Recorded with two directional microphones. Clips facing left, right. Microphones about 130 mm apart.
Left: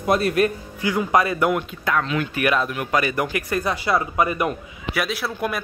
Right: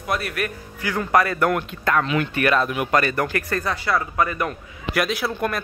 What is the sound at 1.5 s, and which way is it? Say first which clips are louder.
Speech: right 1 dB; 5° left (ahead or behind).